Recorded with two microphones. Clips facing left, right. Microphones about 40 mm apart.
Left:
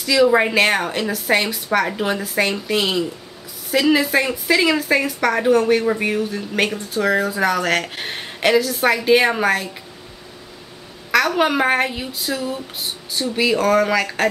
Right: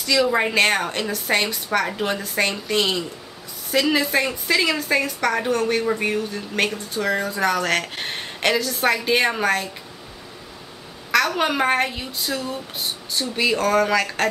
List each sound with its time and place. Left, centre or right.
0.0 s a woman's voice: centre
11.1 s a woman's voice: centre